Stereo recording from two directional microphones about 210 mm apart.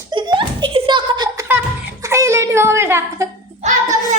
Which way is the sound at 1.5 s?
10° right (ahead or behind).